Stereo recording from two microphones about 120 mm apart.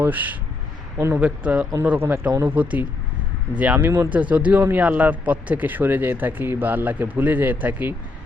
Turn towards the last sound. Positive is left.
turn(degrees=-15)  # may be behind; listen again after turning